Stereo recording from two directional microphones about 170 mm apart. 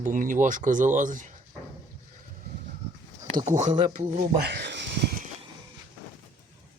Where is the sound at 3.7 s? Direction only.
25° right (ahead or behind).